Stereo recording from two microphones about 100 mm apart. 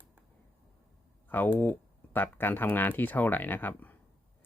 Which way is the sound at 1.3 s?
20° left (ahead or behind).